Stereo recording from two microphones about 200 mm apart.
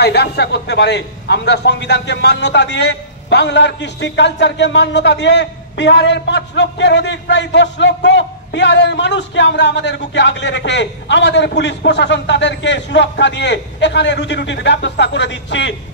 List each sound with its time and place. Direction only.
0.0 s a man's voice: 55° left (ahead or behind)